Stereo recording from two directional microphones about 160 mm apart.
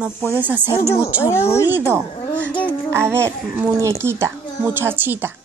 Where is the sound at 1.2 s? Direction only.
15° left (ahead or behind).